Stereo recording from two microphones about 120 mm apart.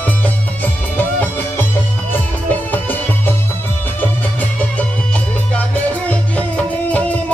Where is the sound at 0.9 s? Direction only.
15° left (ahead or behind).